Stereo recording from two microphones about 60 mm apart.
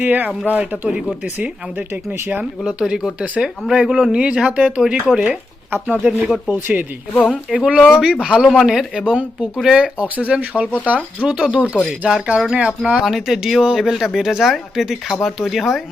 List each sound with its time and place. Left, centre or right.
0.0 s speech: right
1.9 s speech: right
2.4 s speech: centre
6.5 s speech: right
11.3 s speech: centre